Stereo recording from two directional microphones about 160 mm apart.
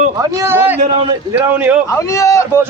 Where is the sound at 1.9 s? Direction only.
20° left (ahead or behind).